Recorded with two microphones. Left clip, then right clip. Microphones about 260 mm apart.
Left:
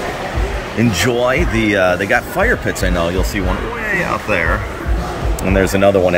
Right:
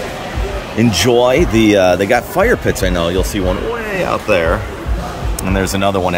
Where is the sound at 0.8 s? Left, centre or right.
Centre.